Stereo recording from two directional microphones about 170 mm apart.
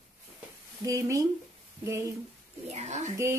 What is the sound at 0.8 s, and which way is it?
Speech, 20° right (ahead or behind).